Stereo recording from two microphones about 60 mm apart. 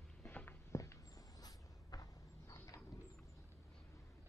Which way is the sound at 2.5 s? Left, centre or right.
Left.